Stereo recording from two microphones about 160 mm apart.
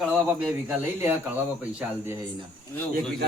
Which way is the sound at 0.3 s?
10° right (ahead or behind).